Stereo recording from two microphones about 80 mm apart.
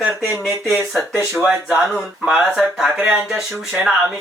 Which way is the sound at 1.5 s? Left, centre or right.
Centre.